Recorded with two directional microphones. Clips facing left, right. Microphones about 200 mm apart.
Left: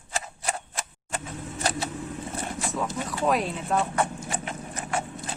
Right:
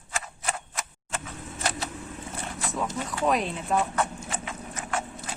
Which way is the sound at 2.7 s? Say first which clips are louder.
Right 1 dB; centre (ahead or behind).